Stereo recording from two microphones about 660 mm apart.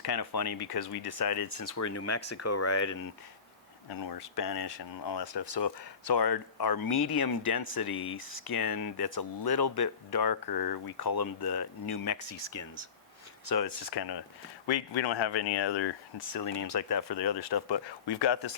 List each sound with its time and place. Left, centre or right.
0.0 s speech: left
4.1 s speech: left